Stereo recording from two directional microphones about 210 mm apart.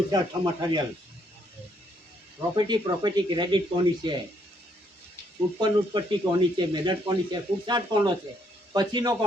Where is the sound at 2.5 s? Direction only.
20° right (ahead or behind).